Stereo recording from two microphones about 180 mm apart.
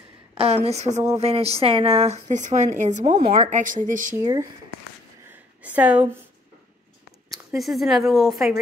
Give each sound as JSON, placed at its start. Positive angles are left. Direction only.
{"t": 0.4, "sound": "a woman's voice", "side_deg": -35}
{"t": 4.2, "sound": "speech", "side_deg": -20}
{"t": 5.6, "sound": "a sound", "side_deg": -10}
{"t": 7.2, "sound": "speech", "side_deg": 0}